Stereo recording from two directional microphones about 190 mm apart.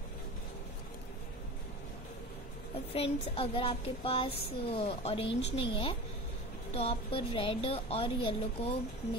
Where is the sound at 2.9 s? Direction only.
30° left (ahead or behind).